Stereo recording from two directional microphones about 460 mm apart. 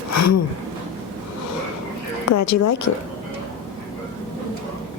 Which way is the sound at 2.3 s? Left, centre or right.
Left.